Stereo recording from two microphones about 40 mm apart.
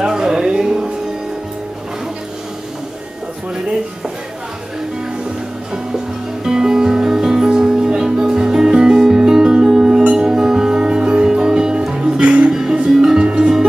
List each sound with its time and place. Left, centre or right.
0.0 s music: centre
6.4 s music: centre
12.4 s music: centre